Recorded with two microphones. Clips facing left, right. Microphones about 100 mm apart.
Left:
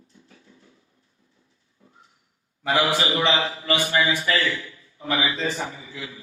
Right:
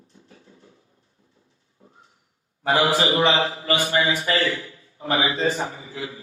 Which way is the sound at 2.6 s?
35° right (ahead or behind).